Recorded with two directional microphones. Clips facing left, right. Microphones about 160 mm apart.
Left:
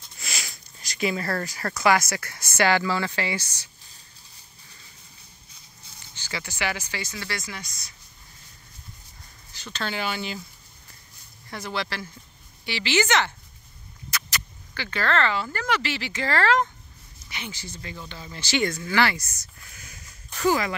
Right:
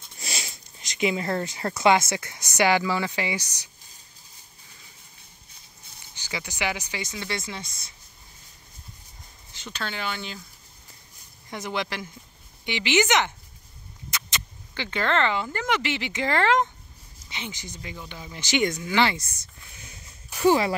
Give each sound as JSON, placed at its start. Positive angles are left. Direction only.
{"t": 0.2, "sound": "speech", "side_deg": -30}
{"t": 6.1, "sound": "speech", "side_deg": -15}
{"t": 9.5, "sound": "a sound", "side_deg": -25}
{"t": 9.8, "sound": "speech", "side_deg": 5}
{"t": 11.5, "sound": "speech", "side_deg": -20}